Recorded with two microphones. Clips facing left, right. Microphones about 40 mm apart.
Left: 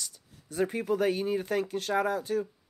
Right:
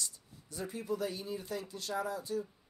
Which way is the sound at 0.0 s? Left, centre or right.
Left.